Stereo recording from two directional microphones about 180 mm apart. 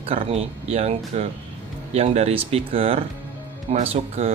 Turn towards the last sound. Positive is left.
turn(degrees=-35)  # may be behind; listen again after turning